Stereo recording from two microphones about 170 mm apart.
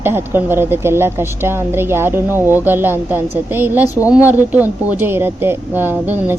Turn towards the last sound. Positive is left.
turn(degrees=-10)  # may be behind; listen again after turning